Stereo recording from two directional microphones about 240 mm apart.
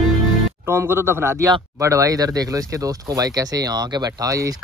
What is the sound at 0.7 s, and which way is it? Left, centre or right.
Speech, centre.